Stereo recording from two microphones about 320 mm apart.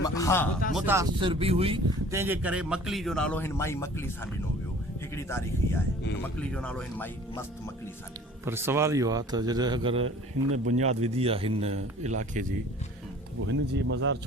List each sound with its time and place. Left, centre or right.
0.0 s music: centre
0.7 s speech: centre
5.1 s speech: centre
8.4 s a man's voice: centre; by 12.5 s right
13.4 s speech: right